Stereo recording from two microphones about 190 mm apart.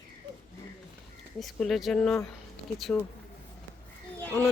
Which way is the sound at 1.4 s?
Centre (ahead or behind).